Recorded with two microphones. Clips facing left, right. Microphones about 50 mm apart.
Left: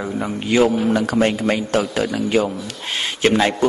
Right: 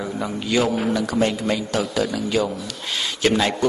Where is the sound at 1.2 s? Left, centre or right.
Left.